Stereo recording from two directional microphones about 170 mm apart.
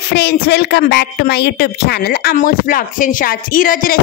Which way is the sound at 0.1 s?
80° left.